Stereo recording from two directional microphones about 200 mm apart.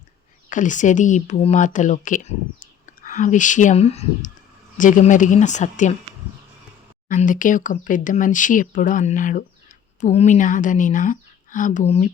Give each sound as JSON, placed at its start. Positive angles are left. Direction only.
{"t": 0.5, "sound": "speech", "side_deg": 40}
{"t": 7.1, "sound": "speech", "side_deg": 40}